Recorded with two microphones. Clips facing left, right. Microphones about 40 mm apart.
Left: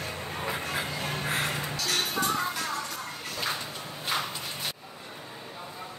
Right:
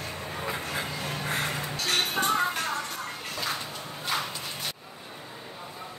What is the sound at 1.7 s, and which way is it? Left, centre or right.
Music, right.